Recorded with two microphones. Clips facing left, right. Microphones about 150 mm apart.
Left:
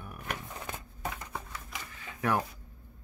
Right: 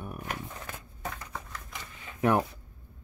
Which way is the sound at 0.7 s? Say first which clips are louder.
Left 1 dB; 10° left (ahead or behind).